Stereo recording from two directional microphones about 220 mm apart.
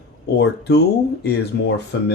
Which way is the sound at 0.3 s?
50° left (ahead or behind).